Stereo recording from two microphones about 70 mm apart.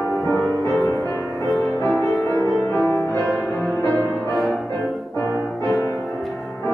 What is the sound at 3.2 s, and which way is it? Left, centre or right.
Music, centre.